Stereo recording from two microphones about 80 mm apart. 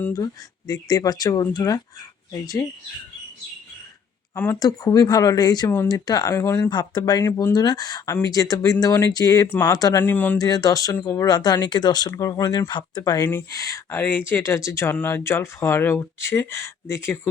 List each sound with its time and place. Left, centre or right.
0.7 s speech: left
4.6 s speech: left
5.6 s speech: left
5.9 s speech: left
6.3 s speech: left
6.6 s speech: left
10.0 s speech: left
10.3 s speech: left
11.3 s speech: left
12.1 s speech: left
13.2 s speech: left
14.0 s speech: left